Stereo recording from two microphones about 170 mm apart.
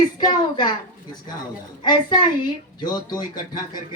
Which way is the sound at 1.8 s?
25° left (ahead or behind).